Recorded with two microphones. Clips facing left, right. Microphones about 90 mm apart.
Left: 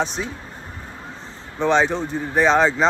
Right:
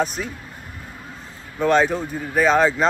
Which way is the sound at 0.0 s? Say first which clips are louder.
Right 1 dB; 5° right (ahead or behind).